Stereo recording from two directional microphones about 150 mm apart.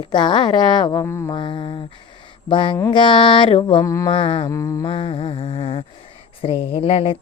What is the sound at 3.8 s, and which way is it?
Speech, 20° left (ahead or behind).